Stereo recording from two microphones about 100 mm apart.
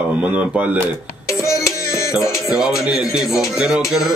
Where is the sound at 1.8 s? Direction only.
30° left (ahead or behind).